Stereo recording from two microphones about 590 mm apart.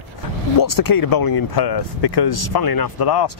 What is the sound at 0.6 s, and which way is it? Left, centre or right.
Speech, left.